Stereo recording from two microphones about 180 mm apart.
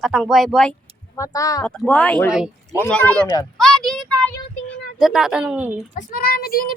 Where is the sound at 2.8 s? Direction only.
10° left (ahead or behind).